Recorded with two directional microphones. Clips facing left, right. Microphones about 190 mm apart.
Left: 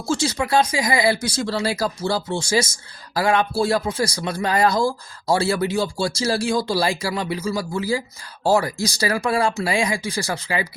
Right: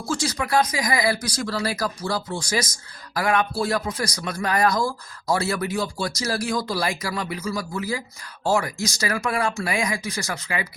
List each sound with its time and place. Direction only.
0.0 s speech: 25° left (ahead or behind)